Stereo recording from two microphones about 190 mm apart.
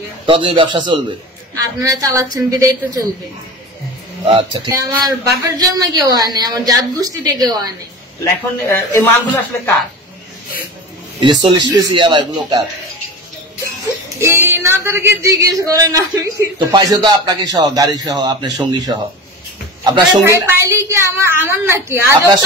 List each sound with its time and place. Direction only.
0.3 s a woman's voice: 25° right (ahead or behind)
4.3 s speech: 25° right (ahead or behind)
8.2 s a man's voice: 10° left (ahead or behind)
11.4 s speech: 25° right (ahead or behind)
14.2 s speech: 10° right (ahead or behind)
20.2 s a woman's voice: 15° right (ahead or behind)